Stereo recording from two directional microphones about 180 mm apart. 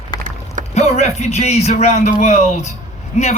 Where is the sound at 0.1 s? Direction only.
25° left (ahead or behind).